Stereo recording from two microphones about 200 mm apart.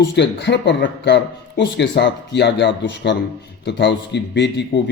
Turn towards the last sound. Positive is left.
turn(degrees=60)  # may be behind; listen again after turning